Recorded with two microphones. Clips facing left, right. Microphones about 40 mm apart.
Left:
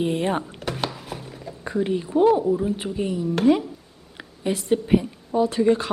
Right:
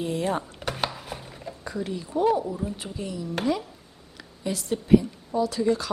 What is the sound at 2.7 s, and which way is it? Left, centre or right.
A woman's voice, left.